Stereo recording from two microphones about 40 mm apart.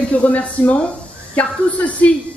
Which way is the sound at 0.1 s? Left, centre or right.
Left.